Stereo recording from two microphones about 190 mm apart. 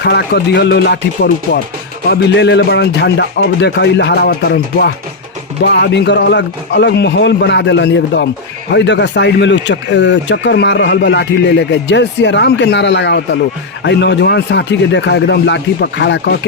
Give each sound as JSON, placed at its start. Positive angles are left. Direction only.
{"t": 0.0, "sound": "speech", "side_deg": 60}